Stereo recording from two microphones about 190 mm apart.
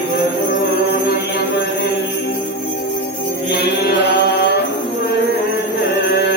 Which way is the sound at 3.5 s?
60° left (ahead or behind).